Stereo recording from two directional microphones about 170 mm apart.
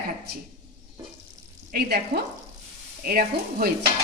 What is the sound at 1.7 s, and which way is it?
A woman's voice, 65° right (ahead or behind).